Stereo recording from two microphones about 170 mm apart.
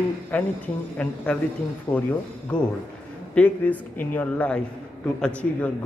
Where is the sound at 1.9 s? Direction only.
20° left (ahead or behind).